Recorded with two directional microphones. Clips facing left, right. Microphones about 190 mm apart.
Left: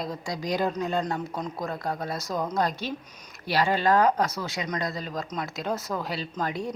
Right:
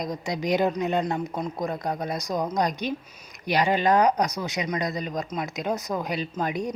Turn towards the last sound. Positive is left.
turn(degrees=-15)  # may be behind; listen again after turning